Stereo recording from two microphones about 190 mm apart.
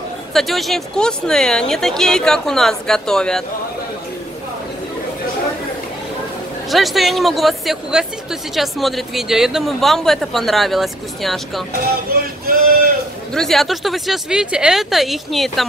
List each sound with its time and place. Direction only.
0.3 s speech: centre (ahead or behind)
6.7 s speech: centre (ahead or behind)
12.1 s a sound: 50° right (ahead or behind)
13.3 s speech: centre (ahead or behind)